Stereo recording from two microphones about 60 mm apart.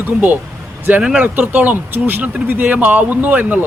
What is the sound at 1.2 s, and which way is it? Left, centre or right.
Speech, right.